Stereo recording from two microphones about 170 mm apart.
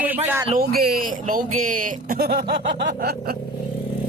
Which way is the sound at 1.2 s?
50° right (ahead or behind).